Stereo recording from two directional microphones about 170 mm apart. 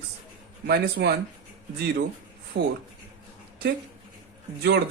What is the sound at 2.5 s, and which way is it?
Speech, 90° right.